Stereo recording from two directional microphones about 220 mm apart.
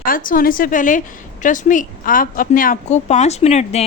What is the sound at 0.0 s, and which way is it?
Speech, 40° left (ahead or behind).